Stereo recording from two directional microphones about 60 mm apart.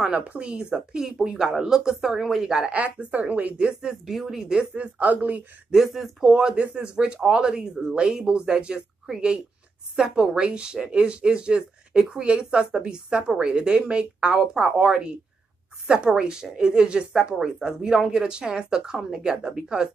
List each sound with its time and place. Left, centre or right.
0.3 s speech: right
2.7 s speech: right
4.9 s speech: right
5.7 s speech: centre